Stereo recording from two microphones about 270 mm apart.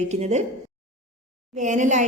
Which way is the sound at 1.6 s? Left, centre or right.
Right.